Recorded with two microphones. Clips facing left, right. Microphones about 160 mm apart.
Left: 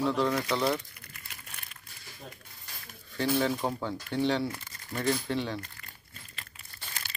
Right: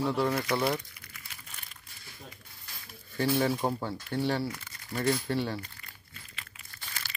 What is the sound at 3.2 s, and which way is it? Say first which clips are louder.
Speech: right 1 dB; 10° right (ahead or behind).